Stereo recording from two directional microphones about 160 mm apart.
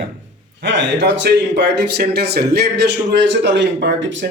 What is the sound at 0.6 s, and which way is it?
Speech, 90° right.